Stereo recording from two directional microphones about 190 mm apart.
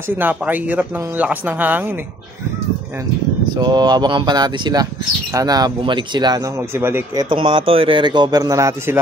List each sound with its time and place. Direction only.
0.1 s speech: 10° right (ahead or behind)
3.5 s speech: 20° right (ahead or behind)
7.2 s speech: 25° right (ahead or behind)